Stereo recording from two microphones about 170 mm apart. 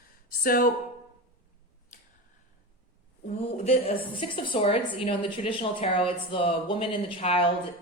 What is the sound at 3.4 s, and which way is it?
A woman's voice, 35° left (ahead or behind).